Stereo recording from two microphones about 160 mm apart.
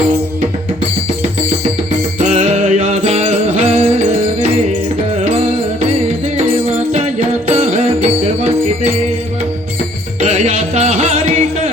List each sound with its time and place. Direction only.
2.1 s music: 45° right (ahead or behind)
5.8 s music: 45° right (ahead or behind)
10.2 s music: 45° right (ahead or behind)